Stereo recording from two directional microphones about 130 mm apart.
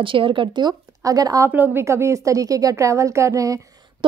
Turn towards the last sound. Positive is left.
turn(degrees=-25)  # may be behind; listen again after turning